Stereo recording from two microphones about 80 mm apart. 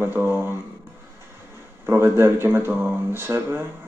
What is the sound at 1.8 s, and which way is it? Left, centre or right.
Speech, right.